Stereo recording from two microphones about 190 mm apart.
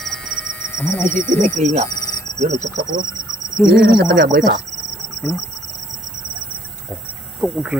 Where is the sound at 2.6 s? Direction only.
20° right (ahead or behind).